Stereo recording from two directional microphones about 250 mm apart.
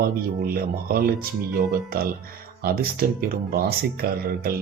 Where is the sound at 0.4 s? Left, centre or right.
Right.